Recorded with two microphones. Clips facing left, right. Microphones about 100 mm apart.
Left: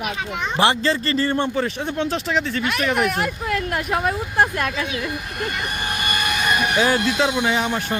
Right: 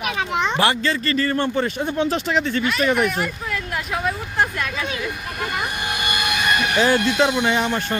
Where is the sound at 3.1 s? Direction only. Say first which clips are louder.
Left 2 dB; 55° left (ahead or behind).